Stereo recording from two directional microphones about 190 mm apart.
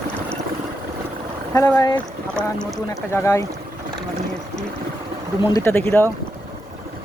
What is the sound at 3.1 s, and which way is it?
Speech, 15° left (ahead or behind).